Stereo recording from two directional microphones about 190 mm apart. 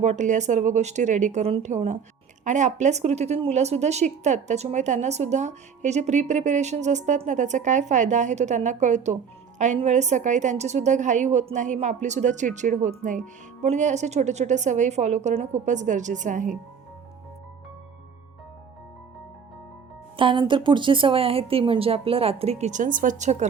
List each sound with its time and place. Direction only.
0.0 s a woman's voice: 40° right (ahead or behind)
20.1 s a woman's voice: 25° right (ahead or behind)